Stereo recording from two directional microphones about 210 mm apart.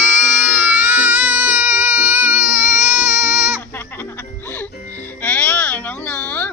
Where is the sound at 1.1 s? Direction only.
10° right (ahead or behind).